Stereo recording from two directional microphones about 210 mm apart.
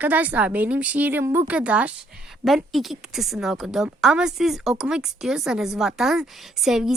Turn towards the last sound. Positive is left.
turn(degrees=0)  # may be behind; listen again after turning